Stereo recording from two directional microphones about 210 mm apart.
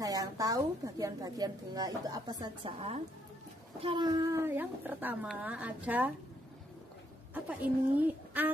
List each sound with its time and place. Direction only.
0.0 s a woman's voice: 15° right (ahead or behind)
7.3 s a woman's voice: 5° right (ahead or behind)